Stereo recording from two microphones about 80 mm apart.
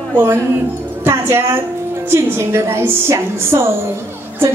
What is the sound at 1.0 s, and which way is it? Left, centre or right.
A woman's voice, right.